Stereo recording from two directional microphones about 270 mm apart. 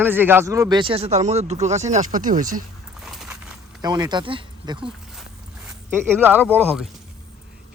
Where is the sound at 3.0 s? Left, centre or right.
Centre.